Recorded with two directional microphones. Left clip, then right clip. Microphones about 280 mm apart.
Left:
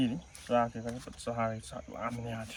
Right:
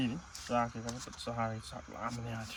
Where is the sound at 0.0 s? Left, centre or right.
Centre.